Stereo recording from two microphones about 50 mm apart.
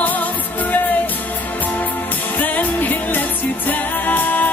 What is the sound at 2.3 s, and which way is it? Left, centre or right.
Music, left.